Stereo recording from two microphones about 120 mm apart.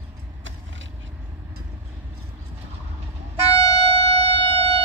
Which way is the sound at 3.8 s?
55° right (ahead or behind).